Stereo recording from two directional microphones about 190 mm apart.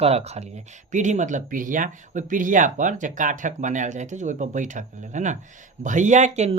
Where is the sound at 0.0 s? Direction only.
35° right (ahead or behind).